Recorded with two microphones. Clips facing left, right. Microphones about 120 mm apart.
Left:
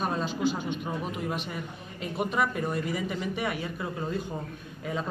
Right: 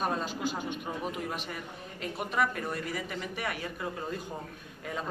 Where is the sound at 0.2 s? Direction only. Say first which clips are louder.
Left 5 dB; 45° right (ahead or behind).